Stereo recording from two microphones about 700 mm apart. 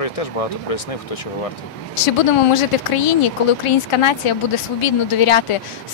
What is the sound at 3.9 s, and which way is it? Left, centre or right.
Speech, left.